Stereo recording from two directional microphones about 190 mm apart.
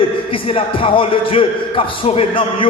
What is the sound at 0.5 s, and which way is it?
A man's voice, 30° left (ahead or behind).